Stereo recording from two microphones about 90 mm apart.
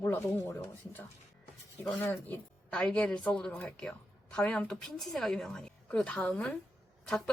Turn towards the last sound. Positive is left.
turn(degrees=10)  # may be behind; listen again after turning